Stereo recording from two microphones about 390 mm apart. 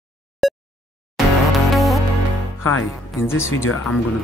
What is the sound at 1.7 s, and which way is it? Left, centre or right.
Music, centre.